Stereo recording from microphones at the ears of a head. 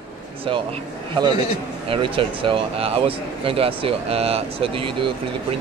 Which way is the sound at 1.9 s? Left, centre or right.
Right.